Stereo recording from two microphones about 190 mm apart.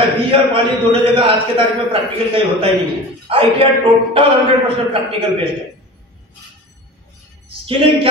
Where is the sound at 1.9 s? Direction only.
30° right (ahead or behind).